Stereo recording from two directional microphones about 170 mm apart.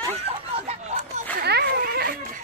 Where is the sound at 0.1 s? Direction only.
35° right (ahead or behind).